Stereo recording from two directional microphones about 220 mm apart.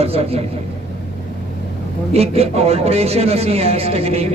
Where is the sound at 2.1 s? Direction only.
25° right (ahead or behind).